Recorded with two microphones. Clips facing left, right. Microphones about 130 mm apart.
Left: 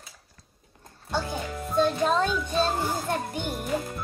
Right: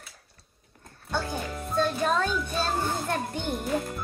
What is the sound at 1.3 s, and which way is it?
Music, 20° left (ahead or behind).